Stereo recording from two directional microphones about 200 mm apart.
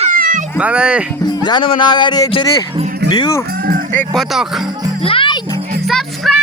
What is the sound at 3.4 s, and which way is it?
Livestock, 50° right (ahead or behind).